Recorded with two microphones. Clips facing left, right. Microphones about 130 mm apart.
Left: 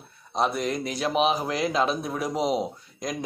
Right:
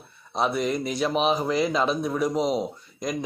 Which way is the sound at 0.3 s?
Centre (ahead or behind).